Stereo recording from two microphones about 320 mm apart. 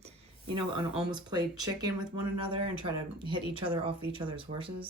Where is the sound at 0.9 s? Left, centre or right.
Centre.